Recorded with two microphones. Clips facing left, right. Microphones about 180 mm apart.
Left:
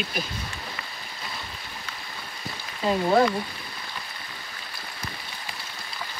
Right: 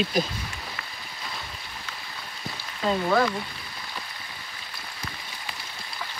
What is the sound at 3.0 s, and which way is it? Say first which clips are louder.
Speech: left 4 dB; 25° left (ahead or behind).